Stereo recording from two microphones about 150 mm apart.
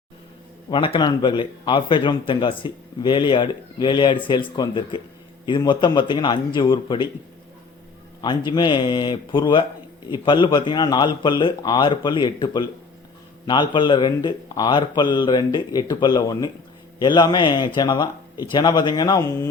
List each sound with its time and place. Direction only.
0.7 s speech: 35° left (ahead or behind)
8.2 s a man's voice: 30° left (ahead or behind)